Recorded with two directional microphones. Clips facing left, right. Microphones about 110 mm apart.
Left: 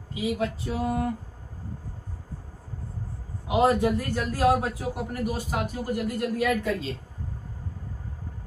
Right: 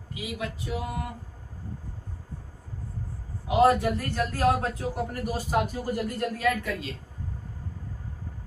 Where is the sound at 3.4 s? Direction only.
20° left (ahead or behind).